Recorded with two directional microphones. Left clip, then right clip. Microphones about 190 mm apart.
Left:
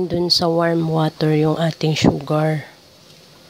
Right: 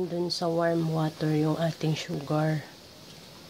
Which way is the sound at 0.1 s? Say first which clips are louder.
Left 11 dB; 30° left (ahead or behind).